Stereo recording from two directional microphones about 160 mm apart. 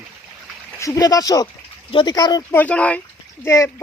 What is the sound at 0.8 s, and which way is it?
Speech, 25° left (ahead or behind).